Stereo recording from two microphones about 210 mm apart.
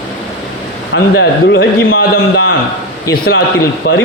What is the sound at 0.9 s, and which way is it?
A man's voice, 50° left (ahead or behind).